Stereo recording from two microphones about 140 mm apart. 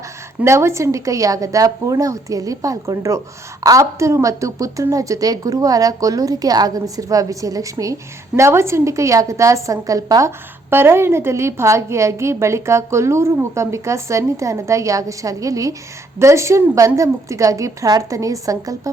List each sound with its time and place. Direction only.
0.4 s a woman's voice: 20° right (ahead or behind)